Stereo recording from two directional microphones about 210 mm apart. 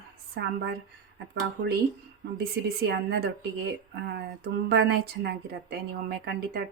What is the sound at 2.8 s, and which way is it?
A woman's voice, 50° right (ahead or behind).